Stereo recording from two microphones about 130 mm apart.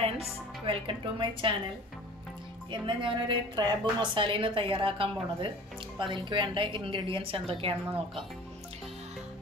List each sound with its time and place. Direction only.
0.7 s a woman's voice: 40° right (ahead or behind)
2.7 s a woman's voice: 40° right (ahead or behind)